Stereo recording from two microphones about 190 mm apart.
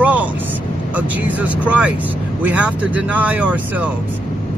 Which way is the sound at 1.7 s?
5° right (ahead or behind).